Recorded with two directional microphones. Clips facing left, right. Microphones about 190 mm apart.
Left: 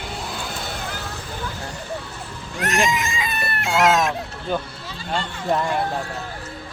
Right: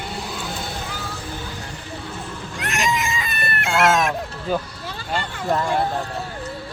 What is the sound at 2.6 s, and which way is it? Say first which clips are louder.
Speech: left 6 dB; 40° left (ahead or behind).